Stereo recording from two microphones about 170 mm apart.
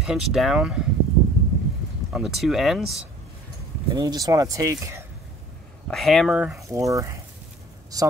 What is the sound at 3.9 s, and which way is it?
Speech, 20° right (ahead or behind).